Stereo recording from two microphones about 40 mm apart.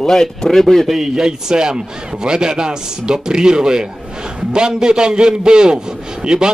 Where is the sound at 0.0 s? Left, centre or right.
Centre.